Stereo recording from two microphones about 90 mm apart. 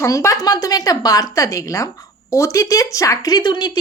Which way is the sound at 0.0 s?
35° left (ahead or behind).